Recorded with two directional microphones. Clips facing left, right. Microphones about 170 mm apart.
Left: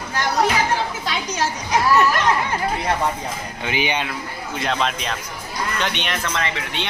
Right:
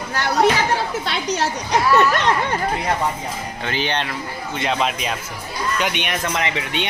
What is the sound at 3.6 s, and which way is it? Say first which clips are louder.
Speech: left 1 dB; 10° left (ahead or behind).